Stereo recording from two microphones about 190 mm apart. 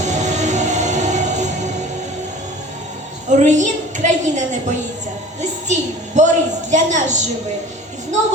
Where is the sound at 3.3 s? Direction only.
40° right (ahead or behind).